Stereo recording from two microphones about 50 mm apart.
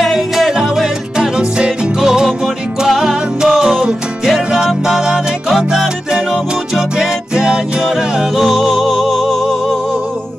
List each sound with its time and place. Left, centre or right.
0.0 s music: centre